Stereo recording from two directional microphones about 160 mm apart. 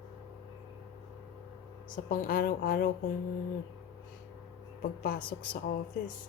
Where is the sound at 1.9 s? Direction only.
60° left (ahead or behind).